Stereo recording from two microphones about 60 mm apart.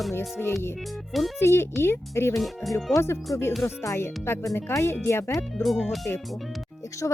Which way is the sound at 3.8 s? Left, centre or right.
Left.